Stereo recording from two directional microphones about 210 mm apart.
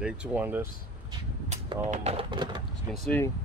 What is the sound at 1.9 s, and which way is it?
Speech, 30° right (ahead or behind).